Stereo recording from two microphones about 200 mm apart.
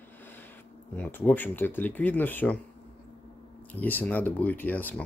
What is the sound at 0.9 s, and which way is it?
Speech, 10° left (ahead or behind).